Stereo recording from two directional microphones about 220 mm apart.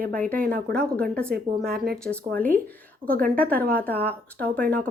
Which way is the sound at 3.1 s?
40° right (ahead or behind).